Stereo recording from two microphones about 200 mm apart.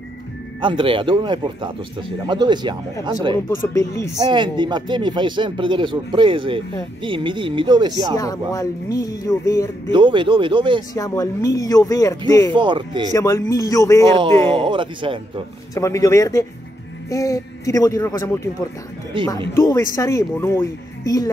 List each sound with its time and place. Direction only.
0.6 s speech: 25° right (ahead or behind)
3.4 s speech: 15° left (ahead or behind)
4.2 s speech: 25° right (ahead or behind)
8.2 s speech: 15° left (ahead or behind)
9.9 s speech: 25° right (ahead or behind)
11.0 s speech: 15° left (ahead or behind)
12.5 s speech: 25° right (ahead or behind)
13.1 s speech: 15° left (ahead or behind)
14.5 s speech: 25° right (ahead or behind)
15.7 s speech: 15° left (ahead or behind)
19.5 s speech: 15° left (ahead or behind)